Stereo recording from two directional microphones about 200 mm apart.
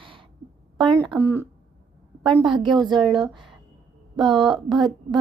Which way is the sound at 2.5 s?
25° right (ahead or behind).